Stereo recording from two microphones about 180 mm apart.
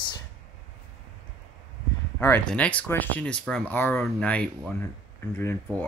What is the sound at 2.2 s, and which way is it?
Speech, 10° left (ahead or behind).